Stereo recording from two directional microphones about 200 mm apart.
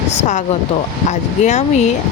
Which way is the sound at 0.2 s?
35° left (ahead or behind).